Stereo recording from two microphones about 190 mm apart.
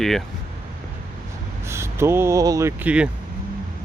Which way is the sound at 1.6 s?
15° right (ahead or behind).